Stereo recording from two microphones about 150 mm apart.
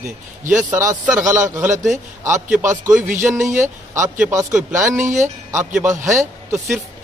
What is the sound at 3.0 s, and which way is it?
A man's voice, 15° right (ahead or behind).